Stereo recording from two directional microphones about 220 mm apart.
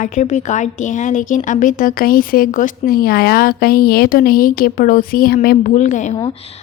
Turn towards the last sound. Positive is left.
turn(degrees=35)  # may be behind; listen again after turning